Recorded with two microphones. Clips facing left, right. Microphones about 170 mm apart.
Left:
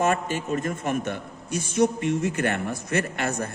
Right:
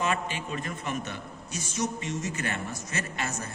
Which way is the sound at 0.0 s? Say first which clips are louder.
Left 6 dB; 45° left (ahead or behind).